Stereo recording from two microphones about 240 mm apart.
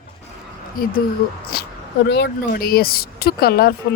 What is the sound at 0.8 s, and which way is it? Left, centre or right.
Speech, left.